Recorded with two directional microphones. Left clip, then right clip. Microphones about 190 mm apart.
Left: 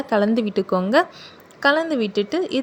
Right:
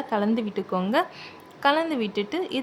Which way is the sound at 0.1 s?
20° left (ahead or behind).